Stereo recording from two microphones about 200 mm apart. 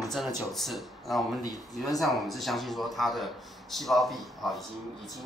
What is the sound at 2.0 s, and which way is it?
Speech, centre (ahead or behind).